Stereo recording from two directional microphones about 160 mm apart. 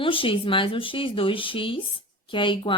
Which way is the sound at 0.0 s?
35° left (ahead or behind).